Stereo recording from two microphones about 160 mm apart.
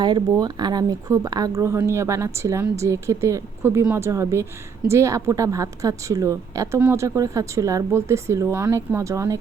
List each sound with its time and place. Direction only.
0.0 s a woman's voice: 25° right (ahead or behind)